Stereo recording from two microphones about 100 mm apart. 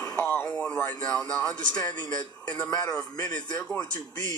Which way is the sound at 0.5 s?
10° left (ahead or behind).